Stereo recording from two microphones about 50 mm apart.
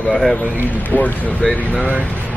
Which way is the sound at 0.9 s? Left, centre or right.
Left.